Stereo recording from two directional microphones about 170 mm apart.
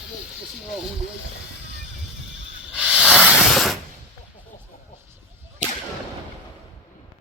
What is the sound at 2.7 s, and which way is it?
Hiss, 5° right (ahead or behind).